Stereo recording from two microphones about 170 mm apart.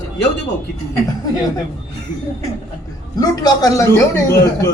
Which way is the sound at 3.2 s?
20° left (ahead or behind).